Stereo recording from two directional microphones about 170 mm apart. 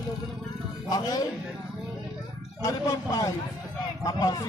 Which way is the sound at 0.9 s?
20° left (ahead or behind).